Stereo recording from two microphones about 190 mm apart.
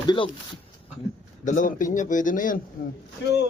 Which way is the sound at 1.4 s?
40° left (ahead or behind).